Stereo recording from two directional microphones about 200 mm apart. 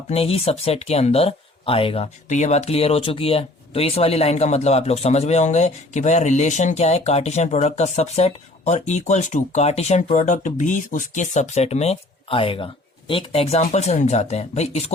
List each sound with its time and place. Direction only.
0.1 s speech: 30° left (ahead or behind)